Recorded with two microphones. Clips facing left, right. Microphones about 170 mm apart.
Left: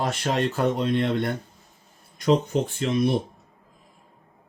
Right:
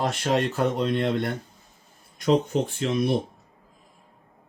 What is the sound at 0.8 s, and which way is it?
Speech, 45° right (ahead or behind).